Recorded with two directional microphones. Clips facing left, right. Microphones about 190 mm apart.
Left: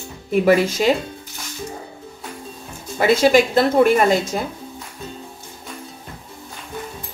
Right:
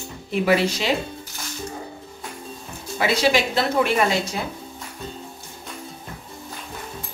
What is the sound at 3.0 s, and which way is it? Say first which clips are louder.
Speech: left 6 dB; 50° left (ahead or behind).